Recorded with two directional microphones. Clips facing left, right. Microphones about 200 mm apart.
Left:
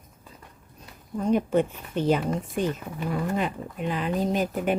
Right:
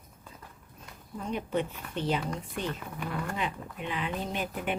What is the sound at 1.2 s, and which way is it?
Speech, 45° left (ahead or behind).